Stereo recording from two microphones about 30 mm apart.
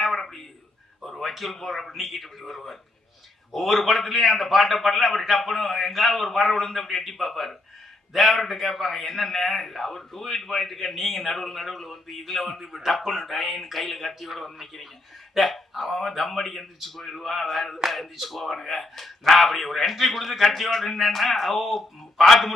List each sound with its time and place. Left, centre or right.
0.2 s a sound: centre
1.6 s a man's voice: centre
6.6 s a man's voice: centre